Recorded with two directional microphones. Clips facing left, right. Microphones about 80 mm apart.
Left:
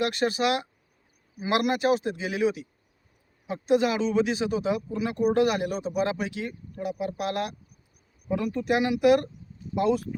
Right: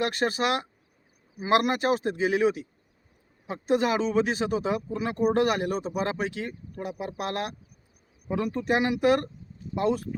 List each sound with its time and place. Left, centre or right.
0.0 s speech: right